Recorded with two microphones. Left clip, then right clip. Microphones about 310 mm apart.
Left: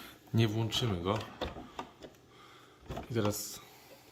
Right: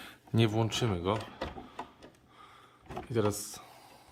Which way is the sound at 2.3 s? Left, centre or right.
Centre.